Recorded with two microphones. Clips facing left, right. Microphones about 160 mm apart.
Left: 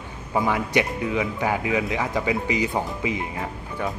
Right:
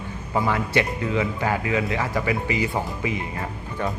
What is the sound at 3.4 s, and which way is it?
Speech, 5° left (ahead or behind).